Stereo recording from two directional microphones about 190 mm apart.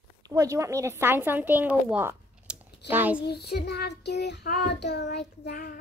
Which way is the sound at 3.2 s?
60° left (ahead or behind).